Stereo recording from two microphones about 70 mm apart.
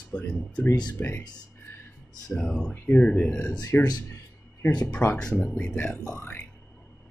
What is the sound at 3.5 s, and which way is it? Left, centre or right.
Speech, left.